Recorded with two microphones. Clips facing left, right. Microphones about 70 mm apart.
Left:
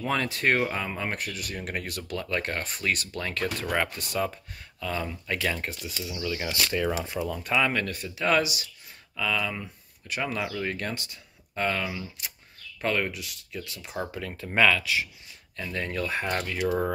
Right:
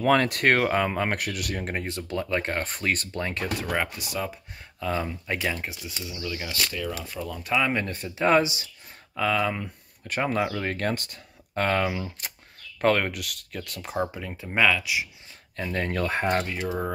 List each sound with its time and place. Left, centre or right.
0.0 s speech: right
1.6 s speech: right
2.7 s speech: right
3.6 s speech: centre
4.7 s speech: right
5.5 s speech: centre
6.4 s speech: left
7.0 s speech: centre
7.4 s speech: centre
7.7 s speech: right
13.9 s speech: right
15.5 s speech: right